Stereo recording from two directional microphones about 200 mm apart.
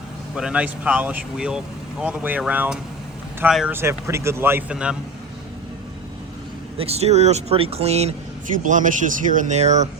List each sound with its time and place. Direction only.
0.3 s speech: 5° right (ahead or behind)
6.7 s speech: 30° right (ahead or behind)